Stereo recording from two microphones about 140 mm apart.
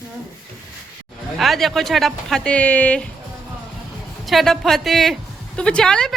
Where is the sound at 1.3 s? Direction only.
Centre (ahead or behind).